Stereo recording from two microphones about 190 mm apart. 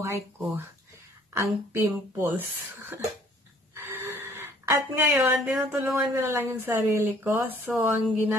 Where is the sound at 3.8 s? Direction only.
10° right (ahead or behind).